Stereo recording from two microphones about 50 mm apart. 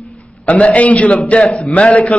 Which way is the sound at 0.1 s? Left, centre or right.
Left.